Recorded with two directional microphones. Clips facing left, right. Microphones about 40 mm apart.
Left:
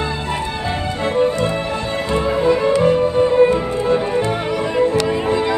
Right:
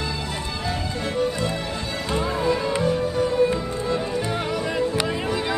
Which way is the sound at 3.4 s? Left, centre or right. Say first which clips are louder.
Left 7 dB; left.